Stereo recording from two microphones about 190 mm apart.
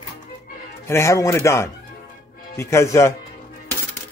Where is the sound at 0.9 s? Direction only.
15° left (ahead or behind).